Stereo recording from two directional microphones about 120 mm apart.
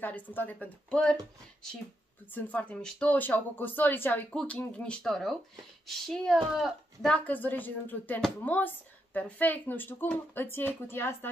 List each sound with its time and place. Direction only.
0.0 s speech: 15° left (ahead or behind)
2.3 s speech: 15° left (ahead or behind)
7.2 s speech: 15° left (ahead or behind)